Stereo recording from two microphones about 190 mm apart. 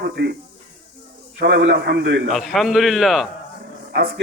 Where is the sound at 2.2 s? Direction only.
Centre (ahead or behind).